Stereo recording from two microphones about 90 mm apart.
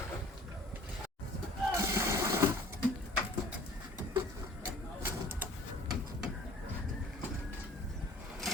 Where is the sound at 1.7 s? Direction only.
35° right (ahead or behind).